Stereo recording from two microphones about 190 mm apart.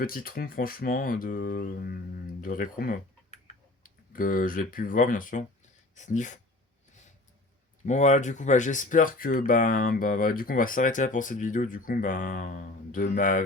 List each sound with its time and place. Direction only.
0.0 s speech: 50° left (ahead or behind)
7.9 s speech: 40° left (ahead or behind)